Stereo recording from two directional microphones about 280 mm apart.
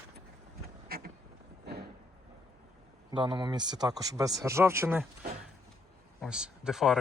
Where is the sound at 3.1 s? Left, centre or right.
Centre.